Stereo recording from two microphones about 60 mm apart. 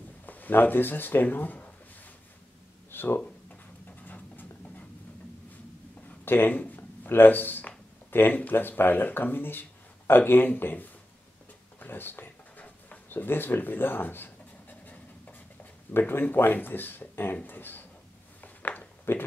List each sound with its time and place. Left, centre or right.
0.3 s speech: left
2.9 s a sound: left
6.2 s speech: left
11.8 s writing: left
15.9 s speech: left
18.4 s a sound: left